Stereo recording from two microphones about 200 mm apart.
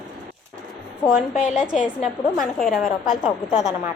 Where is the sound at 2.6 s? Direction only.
Centre (ahead or behind).